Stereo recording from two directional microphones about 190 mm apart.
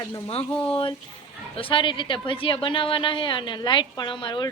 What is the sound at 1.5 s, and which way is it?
A woman's voice, 30° left (ahead or behind).